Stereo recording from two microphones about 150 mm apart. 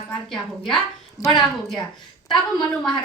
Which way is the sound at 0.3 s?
Centre (ahead or behind).